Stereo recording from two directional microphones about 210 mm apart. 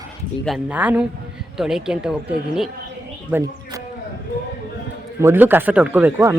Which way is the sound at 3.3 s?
10° right (ahead or behind).